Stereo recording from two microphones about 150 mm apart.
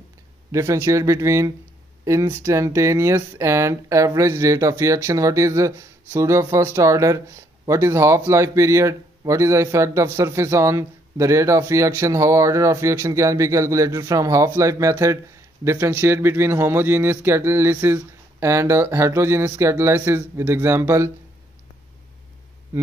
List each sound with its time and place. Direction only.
0.5 s a man's voice: 20° right (ahead or behind)